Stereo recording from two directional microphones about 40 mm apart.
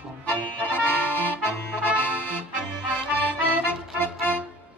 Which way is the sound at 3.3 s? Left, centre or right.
Left.